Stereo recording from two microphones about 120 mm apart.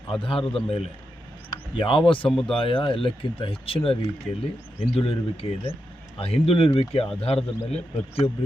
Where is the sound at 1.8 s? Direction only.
45° left (ahead or behind).